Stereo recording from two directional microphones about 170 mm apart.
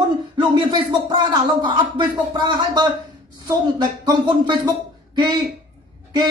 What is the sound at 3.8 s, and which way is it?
Speech, 25° right (ahead or behind).